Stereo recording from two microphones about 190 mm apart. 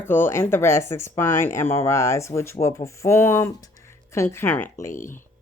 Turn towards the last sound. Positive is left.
turn(degrees=45)  # may be behind; listen again after turning